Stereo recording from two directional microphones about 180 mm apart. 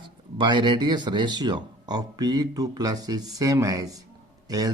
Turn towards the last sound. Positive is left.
turn(degrees=-20)  # may be behind; listen again after turning